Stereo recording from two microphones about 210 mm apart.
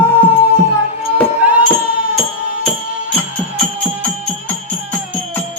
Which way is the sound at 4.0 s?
10° left (ahead or behind).